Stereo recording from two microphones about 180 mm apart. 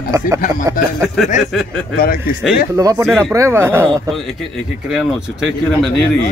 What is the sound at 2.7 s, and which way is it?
Speech, 20° right (ahead or behind).